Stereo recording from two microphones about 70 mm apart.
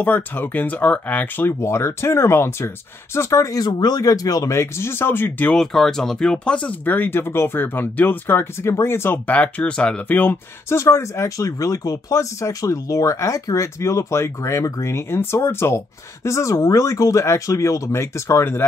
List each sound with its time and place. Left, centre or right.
0.0 s speech: left
1.6 s speech: left
3.6 s speech: left
4.5 s speech: left
5.5 s speech: centre; by 9.2 s left
9.3 s speech: centre
10.7 s speech: left